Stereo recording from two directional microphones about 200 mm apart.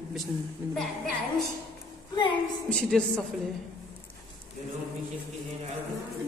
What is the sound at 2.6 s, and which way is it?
Speech, 5° left (ahead or behind).